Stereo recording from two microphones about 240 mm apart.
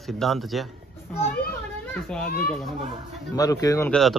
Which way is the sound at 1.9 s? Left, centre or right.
Centre.